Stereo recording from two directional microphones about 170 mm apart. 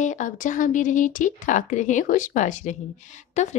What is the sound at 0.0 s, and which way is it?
A woman's voice, 45° left (ahead or behind).